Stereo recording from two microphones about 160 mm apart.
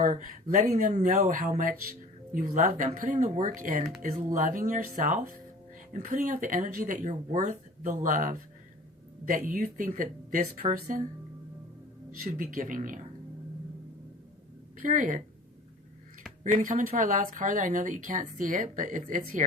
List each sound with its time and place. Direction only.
0.0 s speech: 55° right (ahead or behind)
10.4 s speech: 45° right (ahead or behind)
12.1 s speech: 60° right (ahead or behind)
14.8 s speech: 55° right (ahead or behind)
16.4 s speech: 45° right (ahead or behind)